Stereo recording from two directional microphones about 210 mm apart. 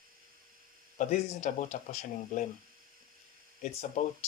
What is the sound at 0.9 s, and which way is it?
Speech, 35° left (ahead or behind).